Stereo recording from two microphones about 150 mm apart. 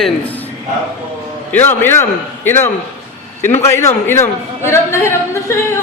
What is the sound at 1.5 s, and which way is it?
A man's voice, 15° left (ahead or behind).